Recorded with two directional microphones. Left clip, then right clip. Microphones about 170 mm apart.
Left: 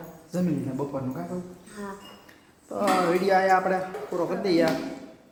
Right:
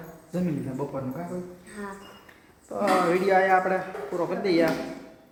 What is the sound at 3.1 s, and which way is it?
A man's voice, 5° left (ahead or behind).